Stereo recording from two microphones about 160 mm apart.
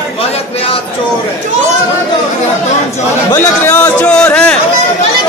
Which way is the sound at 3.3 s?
10° left (ahead or behind).